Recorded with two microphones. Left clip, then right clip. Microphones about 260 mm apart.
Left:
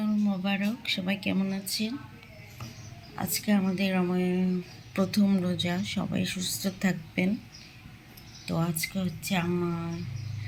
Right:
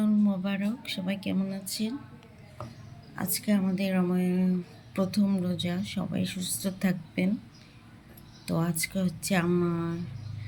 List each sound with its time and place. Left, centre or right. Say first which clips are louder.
0.0 s speech: right 2 dB; centre
3.2 s speech: left 1 dB; centre
8.4 s speech: even; centre